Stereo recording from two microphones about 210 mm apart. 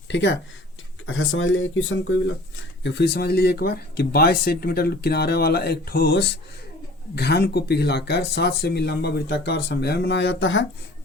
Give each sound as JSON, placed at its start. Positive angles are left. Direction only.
{"t": 0.1, "sound": "speech", "side_deg": 55}
{"t": 1.0, "sound": "speech", "side_deg": 75}
{"t": 2.8, "sound": "speech", "side_deg": 55}